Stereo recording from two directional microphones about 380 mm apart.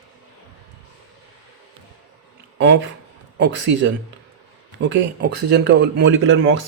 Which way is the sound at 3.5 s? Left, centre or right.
Right.